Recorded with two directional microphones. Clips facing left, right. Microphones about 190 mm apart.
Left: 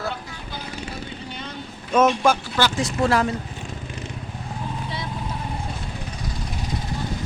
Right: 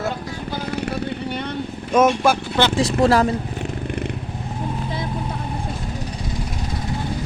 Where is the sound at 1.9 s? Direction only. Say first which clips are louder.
Right 2 dB; 10° right (ahead or behind).